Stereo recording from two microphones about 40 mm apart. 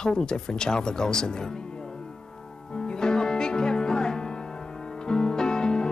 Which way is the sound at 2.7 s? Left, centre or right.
Centre.